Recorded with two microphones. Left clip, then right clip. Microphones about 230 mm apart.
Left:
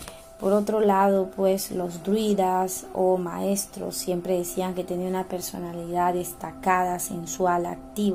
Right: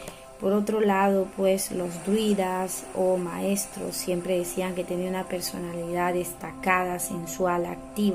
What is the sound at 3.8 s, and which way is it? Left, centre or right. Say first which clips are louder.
Speech: left 1 dB; centre.